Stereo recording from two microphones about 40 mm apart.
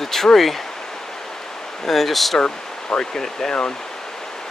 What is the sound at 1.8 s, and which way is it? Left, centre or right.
Speech, centre.